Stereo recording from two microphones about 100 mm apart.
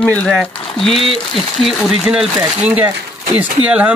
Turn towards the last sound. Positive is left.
turn(degrees=-15)  # may be behind; listen again after turning